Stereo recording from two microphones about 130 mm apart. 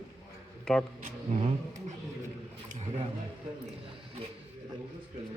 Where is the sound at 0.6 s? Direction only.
5° left (ahead or behind).